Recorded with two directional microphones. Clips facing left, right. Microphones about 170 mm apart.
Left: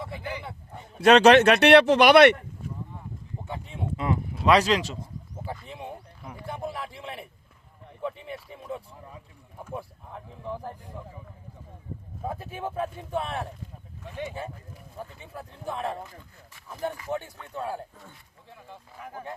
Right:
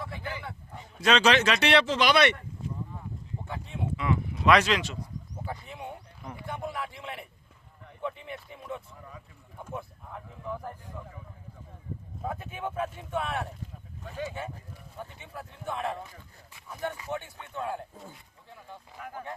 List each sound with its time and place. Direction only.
0.0 s a sound: 20° left (ahead or behind)
0.9 s speech: 60° left (ahead or behind)
3.9 s speech: 40° left (ahead or behind)
5.6 s a sound: 25° left (ahead or behind)
6.5 s a sound: 35° left (ahead or behind)
8.0 s speech: 30° left (ahead or behind)
12.3 s speech: 30° left (ahead or behind)
14.9 s speech: 35° left (ahead or behind)
17.1 s speech: 35° left (ahead or behind)
17.9 s speech: 20° right (ahead or behind)